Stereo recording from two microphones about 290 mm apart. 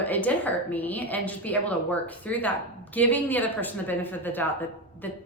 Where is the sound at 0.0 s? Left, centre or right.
Centre.